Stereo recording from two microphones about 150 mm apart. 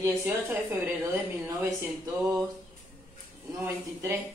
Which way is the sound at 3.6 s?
20° right (ahead or behind).